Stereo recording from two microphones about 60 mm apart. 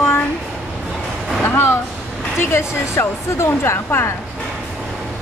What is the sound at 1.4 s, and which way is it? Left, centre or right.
A woman's voice, left.